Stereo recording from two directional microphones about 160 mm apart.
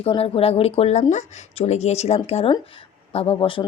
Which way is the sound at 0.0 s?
40° left (ahead or behind).